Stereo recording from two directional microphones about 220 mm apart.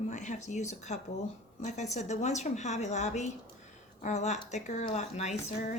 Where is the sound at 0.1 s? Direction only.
30° left (ahead or behind).